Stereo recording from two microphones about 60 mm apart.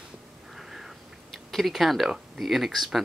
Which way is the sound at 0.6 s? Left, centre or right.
Centre.